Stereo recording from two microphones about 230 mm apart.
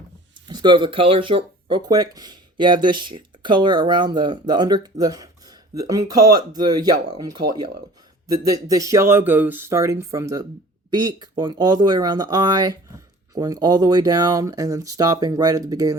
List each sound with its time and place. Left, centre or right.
0.4 s speech: centre